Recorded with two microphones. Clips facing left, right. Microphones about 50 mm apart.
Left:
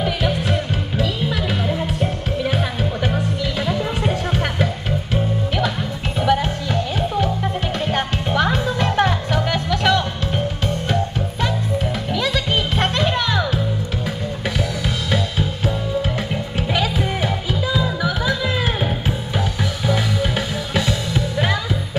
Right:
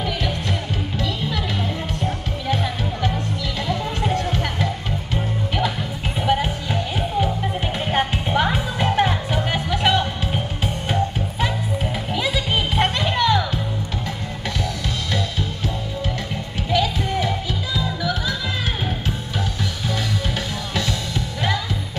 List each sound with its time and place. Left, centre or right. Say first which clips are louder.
0.0 s music: left 4 dB; centre
6.1 s music: left 2 dB; centre
12.1 s music: left 1 dB; centre
14.6 s music: left 3 dB; centre